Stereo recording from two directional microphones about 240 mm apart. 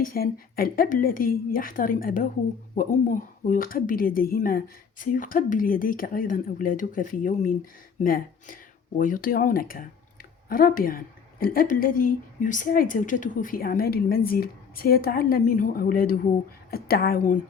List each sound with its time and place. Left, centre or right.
0.0 s a woman's voice: left